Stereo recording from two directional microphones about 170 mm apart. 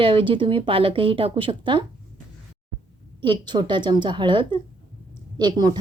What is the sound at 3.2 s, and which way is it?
A woman's voice, 25° right (ahead or behind).